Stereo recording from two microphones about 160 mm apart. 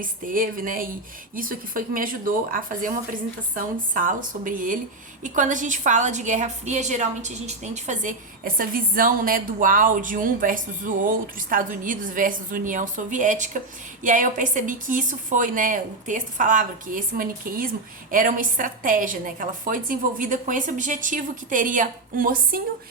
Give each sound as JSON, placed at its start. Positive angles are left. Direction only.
{"t": 0.0, "sound": "a woman's voice", "side_deg": -60}